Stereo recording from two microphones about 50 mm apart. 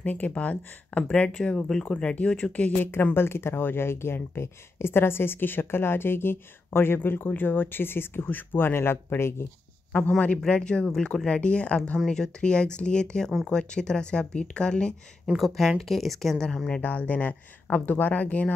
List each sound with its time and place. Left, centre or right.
0.0 s speech: left
3.2 s speech: left
9.9 s speech: left
10.5 s speech: centre
15.3 s speech: centre
16.7 s speech: left